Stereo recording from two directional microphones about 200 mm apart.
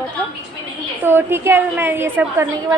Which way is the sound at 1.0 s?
10° right (ahead or behind).